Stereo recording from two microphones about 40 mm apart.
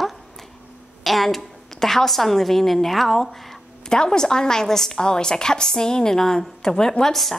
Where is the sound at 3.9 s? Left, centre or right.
Centre.